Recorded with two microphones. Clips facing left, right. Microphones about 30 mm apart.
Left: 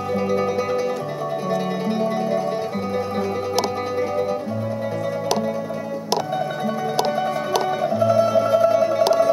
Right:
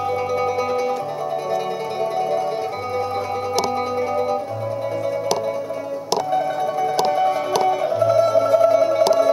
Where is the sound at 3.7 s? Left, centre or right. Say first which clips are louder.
Right 1 dB; centre.